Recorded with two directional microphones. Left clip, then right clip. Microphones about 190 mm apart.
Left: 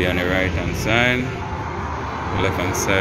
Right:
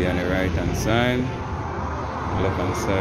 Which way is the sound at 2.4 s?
10° right (ahead or behind).